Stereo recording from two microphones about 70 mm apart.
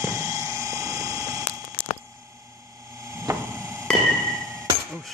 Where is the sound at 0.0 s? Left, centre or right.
Right.